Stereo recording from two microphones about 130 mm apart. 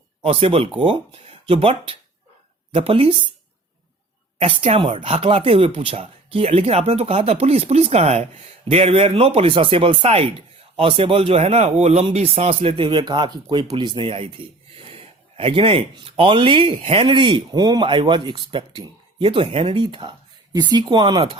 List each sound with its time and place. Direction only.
0.2 s speech: 45° right (ahead or behind)
4.4 s speech: 50° right (ahead or behind)